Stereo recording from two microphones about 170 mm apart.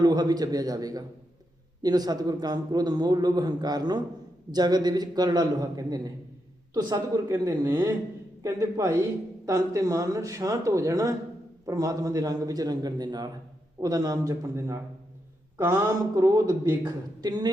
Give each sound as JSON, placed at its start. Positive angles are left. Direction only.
{"t": 0.0, "sound": "a man's voice", "side_deg": -25}